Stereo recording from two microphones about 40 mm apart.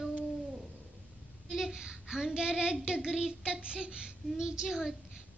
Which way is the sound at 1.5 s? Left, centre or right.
Centre.